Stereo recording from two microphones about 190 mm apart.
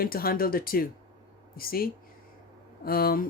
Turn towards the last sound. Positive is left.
turn(degrees=50)  # may be behind; listen again after turning